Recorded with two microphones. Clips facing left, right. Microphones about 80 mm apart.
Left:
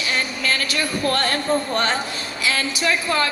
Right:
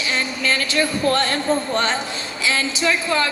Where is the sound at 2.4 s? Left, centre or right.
Right.